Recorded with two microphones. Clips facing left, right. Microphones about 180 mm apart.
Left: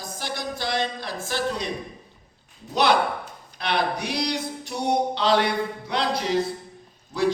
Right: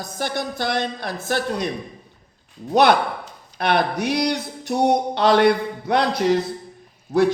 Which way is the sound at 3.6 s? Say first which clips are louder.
Right 5 dB; 55° right (ahead or behind).